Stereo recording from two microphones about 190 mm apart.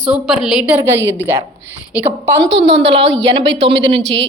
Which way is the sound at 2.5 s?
65° right (ahead or behind).